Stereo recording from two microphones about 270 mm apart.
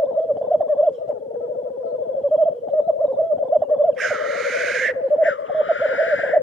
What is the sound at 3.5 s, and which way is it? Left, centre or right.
Bird, centre.